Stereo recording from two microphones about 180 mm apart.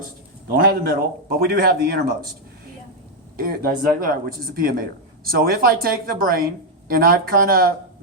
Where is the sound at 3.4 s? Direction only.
55° right (ahead or behind).